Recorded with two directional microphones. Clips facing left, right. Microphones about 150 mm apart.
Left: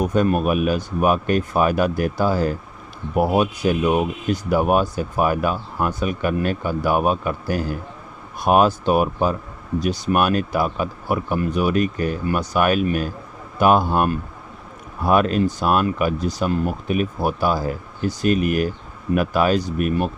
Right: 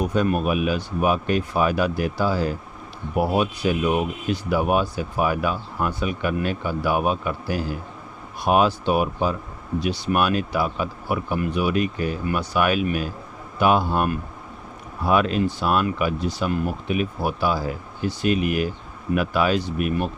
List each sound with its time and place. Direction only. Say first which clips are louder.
0.0 s speech: left 3 dB; 45° left (ahead or behind)